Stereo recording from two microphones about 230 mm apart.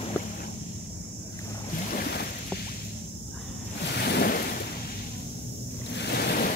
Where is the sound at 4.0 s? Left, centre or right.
Left.